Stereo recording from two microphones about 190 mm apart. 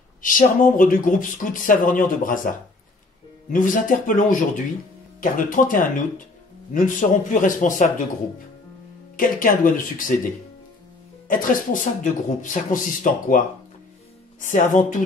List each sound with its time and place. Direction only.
0.2 s speech: 45° left (ahead or behind)
3.5 s speech: 45° left (ahead or behind)
9.1 s speech: 45° left (ahead or behind)
14.4 s speech: 40° left (ahead or behind)